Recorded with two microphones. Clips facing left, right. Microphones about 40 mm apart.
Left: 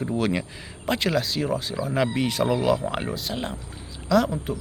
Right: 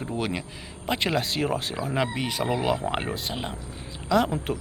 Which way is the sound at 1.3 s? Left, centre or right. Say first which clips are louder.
Left 1 dB; right.